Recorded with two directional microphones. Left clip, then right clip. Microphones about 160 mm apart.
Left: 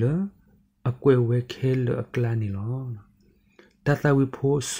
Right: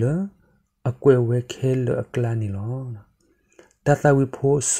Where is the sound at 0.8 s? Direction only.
10° right (ahead or behind).